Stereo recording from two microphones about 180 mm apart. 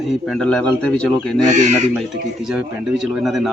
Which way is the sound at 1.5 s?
40° right (ahead or behind).